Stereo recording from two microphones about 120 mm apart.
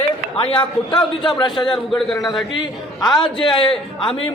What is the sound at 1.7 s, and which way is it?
Speech, centre (ahead or behind).